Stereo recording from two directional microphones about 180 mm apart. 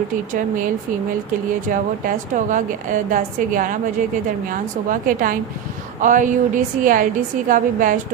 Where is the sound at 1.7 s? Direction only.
45° right (ahead or behind).